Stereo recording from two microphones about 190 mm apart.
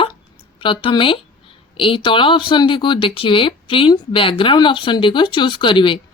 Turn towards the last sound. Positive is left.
turn(degrees=25)  # may be behind; listen again after turning